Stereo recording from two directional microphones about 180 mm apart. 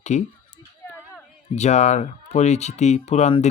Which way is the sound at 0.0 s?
40° left (ahead or behind).